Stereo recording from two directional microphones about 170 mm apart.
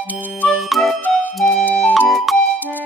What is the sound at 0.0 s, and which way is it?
Music, 10° right (ahead or behind).